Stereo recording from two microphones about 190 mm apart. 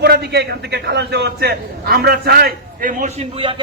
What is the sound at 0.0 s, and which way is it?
A man's voice, 60° right (ahead or behind).